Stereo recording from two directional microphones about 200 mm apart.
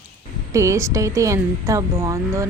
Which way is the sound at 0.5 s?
15° right (ahead or behind).